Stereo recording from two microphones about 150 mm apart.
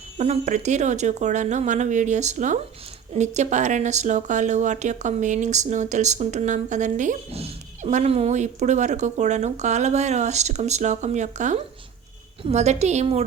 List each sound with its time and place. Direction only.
0.2 s speech: 50° right (ahead or behind)